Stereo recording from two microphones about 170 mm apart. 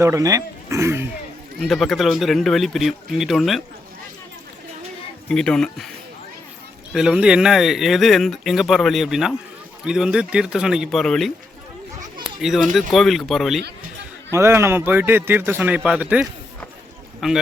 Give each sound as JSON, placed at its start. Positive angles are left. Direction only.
{"t": 0.0, "sound": "speech", "side_deg": -20}
{"t": 1.6, "sound": "speech", "side_deg": 0}
{"t": 5.3, "sound": "speech", "side_deg": 5}
{"t": 6.9, "sound": "speech", "side_deg": -5}
{"t": 12.4, "sound": "speech", "side_deg": 0}
{"t": 14.3, "sound": "speech", "side_deg": -15}